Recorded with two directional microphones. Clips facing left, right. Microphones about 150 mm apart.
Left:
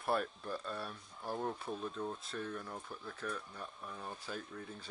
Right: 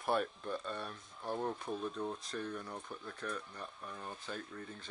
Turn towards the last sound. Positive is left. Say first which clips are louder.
# even
turn(degrees=5)  # may be behind; listen again after turning